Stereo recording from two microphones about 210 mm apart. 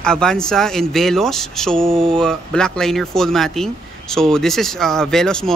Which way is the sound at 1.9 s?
25° right (ahead or behind).